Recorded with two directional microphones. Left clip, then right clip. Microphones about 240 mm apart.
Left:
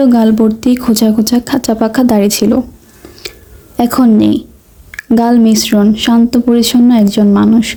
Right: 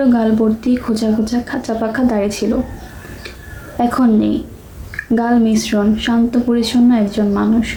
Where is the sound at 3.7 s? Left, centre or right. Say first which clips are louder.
Left 4 dB; left.